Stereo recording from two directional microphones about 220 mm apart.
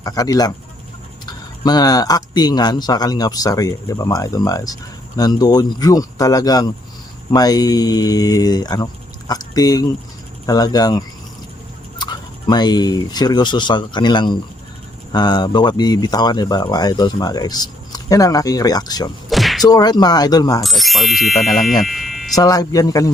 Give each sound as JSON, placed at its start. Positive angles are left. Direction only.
{"t": 0.0, "sound": "speech", "side_deg": 15}
{"t": 1.6, "sound": "speech", "side_deg": 20}
{"t": 19.3, "sound": "a sound", "side_deg": 0}
{"t": 19.6, "sound": "speech", "side_deg": 15}
{"t": 20.6, "sound": "speech", "side_deg": 0}
{"t": 22.4, "sound": "speech", "side_deg": 15}